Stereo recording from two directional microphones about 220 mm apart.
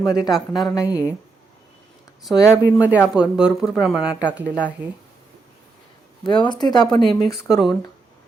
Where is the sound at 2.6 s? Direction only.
5° right (ahead or behind).